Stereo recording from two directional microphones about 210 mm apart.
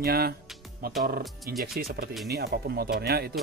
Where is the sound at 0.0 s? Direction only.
45° right (ahead or behind).